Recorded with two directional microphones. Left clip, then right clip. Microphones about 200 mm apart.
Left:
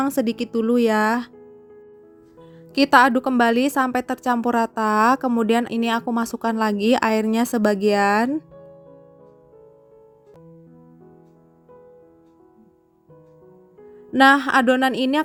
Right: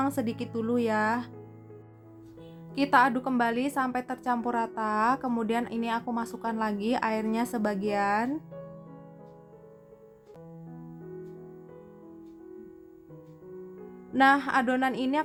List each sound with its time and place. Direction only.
0.0 s a woman's voice: 30° left (ahead or behind)
2.7 s a woman's voice: 35° left (ahead or behind)
14.1 s a woman's voice: 30° left (ahead or behind)